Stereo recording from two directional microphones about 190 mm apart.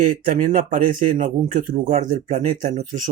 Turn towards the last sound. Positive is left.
turn(degrees=-40)  # may be behind; listen again after turning